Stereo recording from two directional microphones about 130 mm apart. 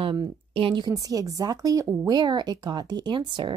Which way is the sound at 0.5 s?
45° right (ahead or behind).